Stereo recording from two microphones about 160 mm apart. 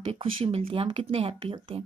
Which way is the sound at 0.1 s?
35° right (ahead or behind).